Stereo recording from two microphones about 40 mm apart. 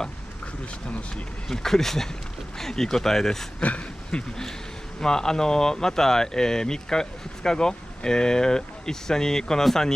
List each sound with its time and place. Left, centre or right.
1.5 s speech: centre
3.6 s speech: left
5.0 s speech: centre